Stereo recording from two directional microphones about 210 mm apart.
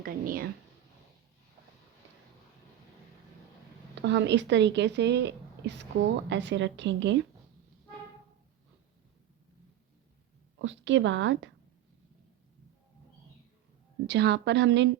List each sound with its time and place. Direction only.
0.0 s speech: 45° right (ahead or behind)
3.9 s speech: 55° right (ahead or behind)
10.6 s speech: 60° right (ahead or behind)
14.1 s speech: 55° right (ahead or behind)